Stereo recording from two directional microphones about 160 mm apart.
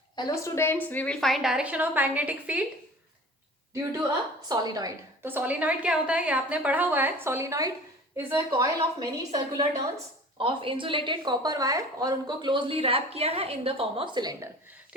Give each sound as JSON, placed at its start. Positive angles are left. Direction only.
{"t": 0.2, "sound": "a woman's voice", "side_deg": 20}
{"t": 4.4, "sound": "a woman's voice", "side_deg": -25}
{"t": 5.2, "sound": "a woman's voice", "side_deg": -10}
{"t": 10.3, "sound": "a woman's voice", "side_deg": -35}